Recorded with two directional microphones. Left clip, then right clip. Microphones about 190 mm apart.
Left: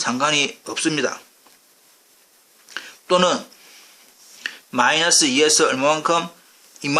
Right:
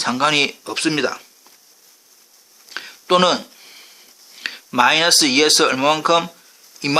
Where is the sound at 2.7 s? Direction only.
20° right (ahead or behind).